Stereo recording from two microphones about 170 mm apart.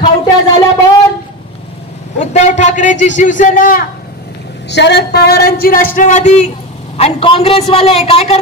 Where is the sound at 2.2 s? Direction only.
45° left (ahead or behind).